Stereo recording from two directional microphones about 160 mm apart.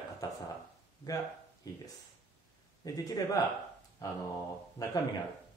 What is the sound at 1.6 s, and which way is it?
Speech, 25° left (ahead or behind).